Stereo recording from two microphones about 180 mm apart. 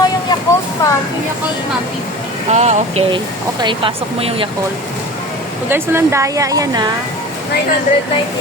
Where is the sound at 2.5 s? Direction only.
40° right (ahead or behind).